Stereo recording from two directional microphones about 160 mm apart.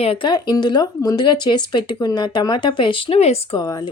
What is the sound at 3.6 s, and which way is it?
Speech, 25° left (ahead or behind).